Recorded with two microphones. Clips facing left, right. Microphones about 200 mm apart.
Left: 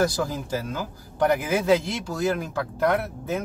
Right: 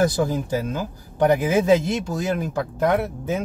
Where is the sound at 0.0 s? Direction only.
20° right (ahead or behind).